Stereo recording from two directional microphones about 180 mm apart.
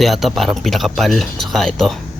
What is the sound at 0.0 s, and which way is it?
Speech, centre (ahead or behind).